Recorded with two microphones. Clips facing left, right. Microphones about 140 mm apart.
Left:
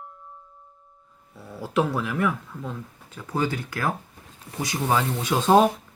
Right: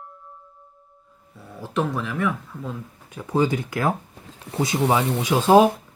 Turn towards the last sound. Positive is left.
turn(degrees=-10)  # may be behind; listen again after turning